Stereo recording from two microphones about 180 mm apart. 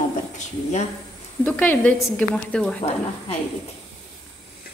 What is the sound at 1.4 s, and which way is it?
A woman's voice, 10° left (ahead or behind).